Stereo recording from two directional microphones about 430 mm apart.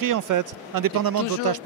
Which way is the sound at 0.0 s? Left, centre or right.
Right.